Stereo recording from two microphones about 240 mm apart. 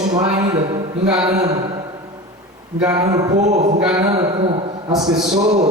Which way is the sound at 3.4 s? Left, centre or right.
Right.